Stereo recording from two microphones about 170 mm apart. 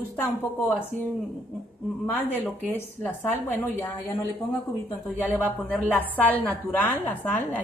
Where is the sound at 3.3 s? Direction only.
10° left (ahead or behind).